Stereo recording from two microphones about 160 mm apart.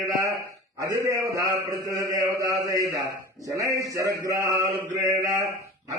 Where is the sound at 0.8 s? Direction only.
20° right (ahead or behind).